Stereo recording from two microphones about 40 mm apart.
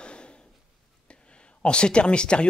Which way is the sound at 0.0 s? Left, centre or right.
Left.